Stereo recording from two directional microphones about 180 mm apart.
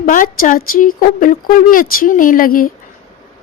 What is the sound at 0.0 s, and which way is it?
Speech, 50° left (ahead or behind).